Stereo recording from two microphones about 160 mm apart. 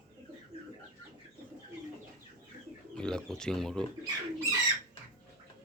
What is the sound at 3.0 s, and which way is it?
Speech, 5° left (ahead or behind).